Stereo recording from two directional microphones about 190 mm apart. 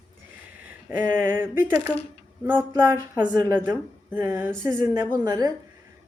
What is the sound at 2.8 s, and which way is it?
A woman's voice, 10° right (ahead or behind).